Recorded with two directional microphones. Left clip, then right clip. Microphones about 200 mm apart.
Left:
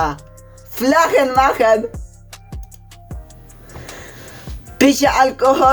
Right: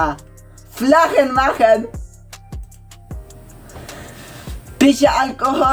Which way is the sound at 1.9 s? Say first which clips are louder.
Even; centre (ahead or behind).